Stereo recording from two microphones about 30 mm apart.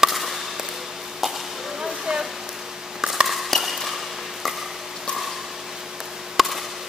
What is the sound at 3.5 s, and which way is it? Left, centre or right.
Ping, centre.